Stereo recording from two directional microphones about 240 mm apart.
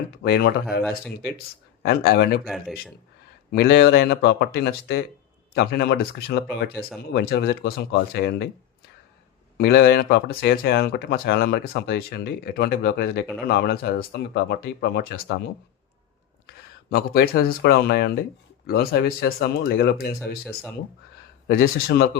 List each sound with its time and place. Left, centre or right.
0.2 s speech: left
1.8 s speech: left
3.5 s speech: left
9.6 s speech: left
16.9 s speech: left
20.1 s speech: centre
21.4 s speech: left